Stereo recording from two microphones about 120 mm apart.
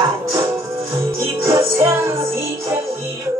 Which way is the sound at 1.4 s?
20° right (ahead or behind).